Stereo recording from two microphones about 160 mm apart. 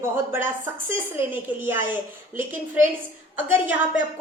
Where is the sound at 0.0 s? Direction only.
15° right (ahead or behind).